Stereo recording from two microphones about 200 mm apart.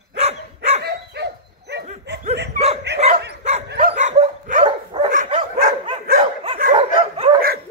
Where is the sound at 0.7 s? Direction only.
55° right (ahead or behind).